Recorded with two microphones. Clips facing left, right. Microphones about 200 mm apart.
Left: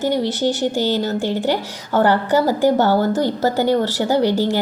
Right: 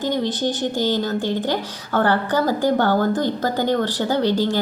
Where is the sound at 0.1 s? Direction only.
20° right (ahead or behind).